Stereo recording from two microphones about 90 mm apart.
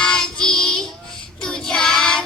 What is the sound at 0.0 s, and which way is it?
Child singing, 10° left (ahead or behind).